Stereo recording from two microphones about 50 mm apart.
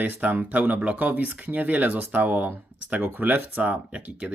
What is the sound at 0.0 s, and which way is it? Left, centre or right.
Speech, right.